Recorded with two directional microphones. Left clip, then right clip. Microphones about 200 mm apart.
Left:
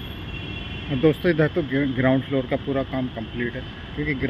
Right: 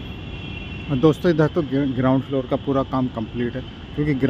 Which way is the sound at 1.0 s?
15° right (ahead or behind).